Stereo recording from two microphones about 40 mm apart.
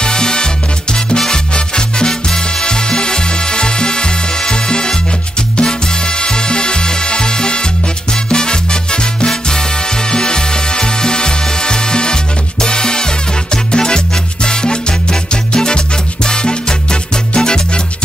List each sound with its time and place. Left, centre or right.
0.0 s music: left
1.1 s salsa music: centre
5.6 s music: left
8.3 s salsa music: left
10.1 s music: left